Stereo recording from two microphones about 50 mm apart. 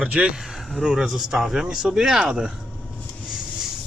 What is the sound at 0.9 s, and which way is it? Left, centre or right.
Speech, centre.